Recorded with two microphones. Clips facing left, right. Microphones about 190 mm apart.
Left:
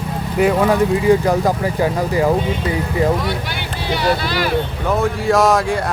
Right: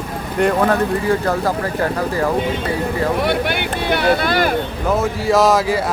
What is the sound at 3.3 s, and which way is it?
Speech, 60° right (ahead or behind).